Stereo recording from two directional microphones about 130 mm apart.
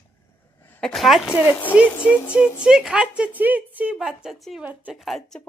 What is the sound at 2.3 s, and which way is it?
A woman's voice, 10° right (ahead or behind).